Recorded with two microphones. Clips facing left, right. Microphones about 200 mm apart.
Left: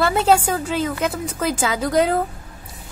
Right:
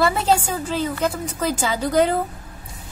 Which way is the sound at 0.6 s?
10° left (ahead or behind).